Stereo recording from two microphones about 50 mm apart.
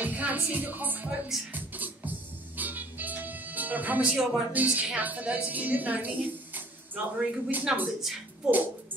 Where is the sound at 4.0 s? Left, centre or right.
Centre.